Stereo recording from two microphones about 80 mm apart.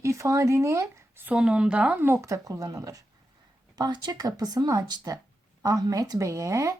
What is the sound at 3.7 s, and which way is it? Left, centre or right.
A woman's voice, right.